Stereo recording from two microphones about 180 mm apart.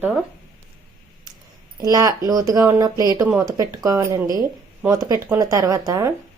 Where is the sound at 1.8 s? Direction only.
20° right (ahead or behind).